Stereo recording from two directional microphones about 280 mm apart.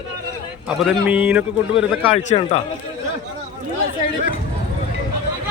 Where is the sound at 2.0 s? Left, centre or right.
Centre.